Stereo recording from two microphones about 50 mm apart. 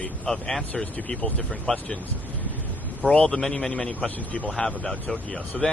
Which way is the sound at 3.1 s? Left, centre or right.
Centre.